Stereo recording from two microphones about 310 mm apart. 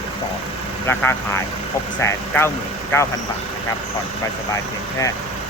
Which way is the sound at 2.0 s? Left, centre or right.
Centre.